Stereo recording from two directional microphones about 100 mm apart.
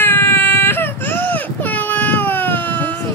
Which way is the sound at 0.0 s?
20° left (ahead or behind).